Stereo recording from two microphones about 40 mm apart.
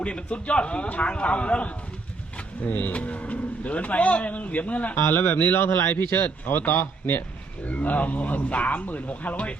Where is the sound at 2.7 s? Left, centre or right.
Left.